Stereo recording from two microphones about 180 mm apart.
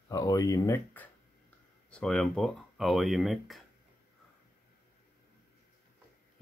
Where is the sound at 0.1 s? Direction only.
20° left (ahead or behind).